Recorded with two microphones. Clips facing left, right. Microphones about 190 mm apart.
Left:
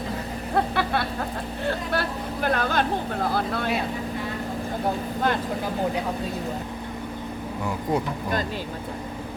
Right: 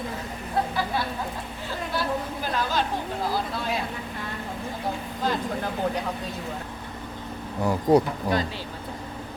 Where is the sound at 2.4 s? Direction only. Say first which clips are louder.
Left 5 dB; 60° left (ahead or behind).